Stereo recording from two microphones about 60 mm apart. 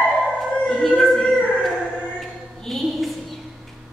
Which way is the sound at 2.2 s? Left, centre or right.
Centre.